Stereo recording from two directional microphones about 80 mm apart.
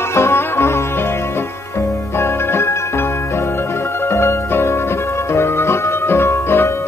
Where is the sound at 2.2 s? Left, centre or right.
Left.